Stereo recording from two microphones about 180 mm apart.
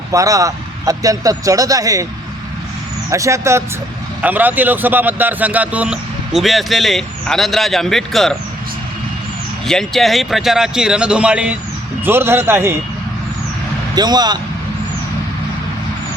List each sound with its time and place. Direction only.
0.1 s a man's voice: 20° right (ahead or behind)
3.1 s speech: 15° right (ahead or behind); by 8.4 s centre (ahead or behind)
9.6 s speech: centre (ahead or behind); by 12.7 s 15° right (ahead or behind)
13.9 s a man's voice: 25° right (ahead or behind)